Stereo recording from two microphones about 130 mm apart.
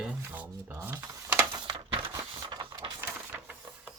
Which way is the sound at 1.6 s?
40° right (ahead or behind).